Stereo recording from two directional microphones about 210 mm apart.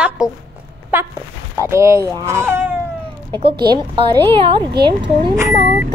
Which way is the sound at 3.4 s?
25° right (ahead or behind).